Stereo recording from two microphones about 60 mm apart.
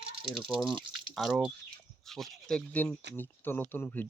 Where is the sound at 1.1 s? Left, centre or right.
Centre.